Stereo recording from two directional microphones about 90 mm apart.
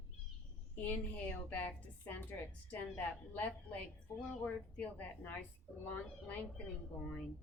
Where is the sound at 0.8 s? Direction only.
15° left (ahead or behind).